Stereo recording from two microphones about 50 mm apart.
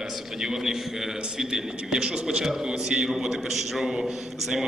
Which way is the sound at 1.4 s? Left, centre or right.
Centre.